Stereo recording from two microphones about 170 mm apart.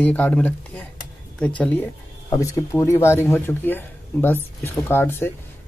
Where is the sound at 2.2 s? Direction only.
20° left (ahead or behind).